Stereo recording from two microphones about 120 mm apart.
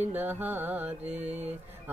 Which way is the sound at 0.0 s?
15° right (ahead or behind).